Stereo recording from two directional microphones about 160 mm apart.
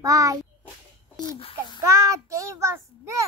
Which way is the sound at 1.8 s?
20° right (ahead or behind).